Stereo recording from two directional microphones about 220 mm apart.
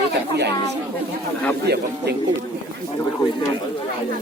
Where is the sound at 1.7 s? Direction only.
50° right (ahead or behind).